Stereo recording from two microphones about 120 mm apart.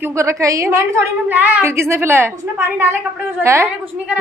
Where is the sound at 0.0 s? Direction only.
25° right (ahead or behind).